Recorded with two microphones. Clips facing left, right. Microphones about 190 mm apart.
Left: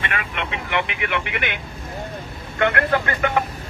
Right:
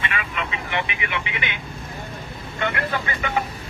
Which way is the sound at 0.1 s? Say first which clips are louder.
Left 1 dB; 65° left (ahead or behind).